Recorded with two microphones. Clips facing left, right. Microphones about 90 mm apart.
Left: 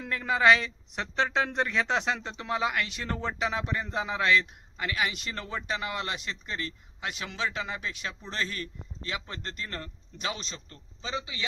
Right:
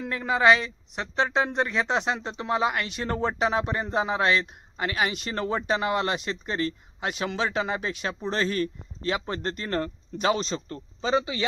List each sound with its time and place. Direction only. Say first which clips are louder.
0.0 s speech: right 2 dB; 20° right (ahead or behind); by 11.4 s 50° right (ahead or behind)